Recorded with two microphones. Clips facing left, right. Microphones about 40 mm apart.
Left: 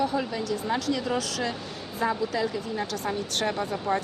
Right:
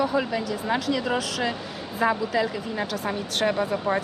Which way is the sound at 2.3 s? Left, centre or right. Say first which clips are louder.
Right 3 dB; right.